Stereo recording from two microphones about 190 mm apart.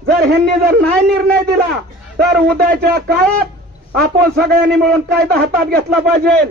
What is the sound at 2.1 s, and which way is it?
A man's voice, 55° right (ahead or behind).